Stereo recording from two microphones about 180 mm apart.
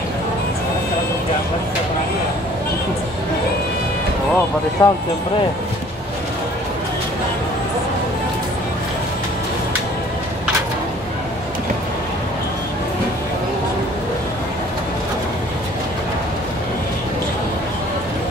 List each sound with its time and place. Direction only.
4.8 s speech: 15° left (ahead or behind)